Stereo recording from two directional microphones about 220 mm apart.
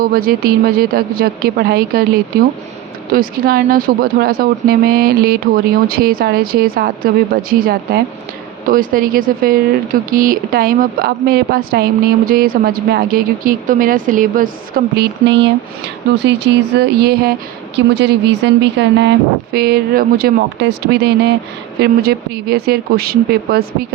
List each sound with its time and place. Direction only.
0.0 s speech: 40° right (ahead or behind)
3.1 s speech: 40° right (ahead or behind)